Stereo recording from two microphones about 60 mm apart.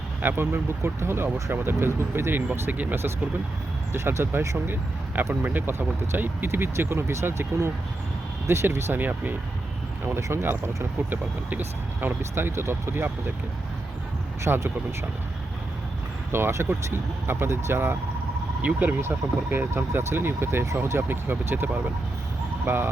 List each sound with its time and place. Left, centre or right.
0.2 s speech: right
10.2 s speech: right
11.1 s speech: right
12.3 s speech: right
14.4 s speech: right
16.3 s speech: right
18.6 s speech: right
19.0 s speech: right
21.2 s speech: right